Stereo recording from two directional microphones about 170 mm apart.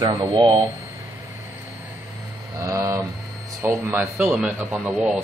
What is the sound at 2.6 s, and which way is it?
A man's voice, 20° right (ahead or behind).